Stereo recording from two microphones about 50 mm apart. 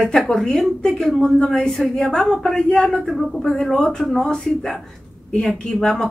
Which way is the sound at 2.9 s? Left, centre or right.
Centre.